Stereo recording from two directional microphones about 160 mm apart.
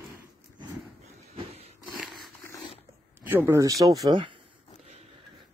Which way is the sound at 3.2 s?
15° right (ahead or behind).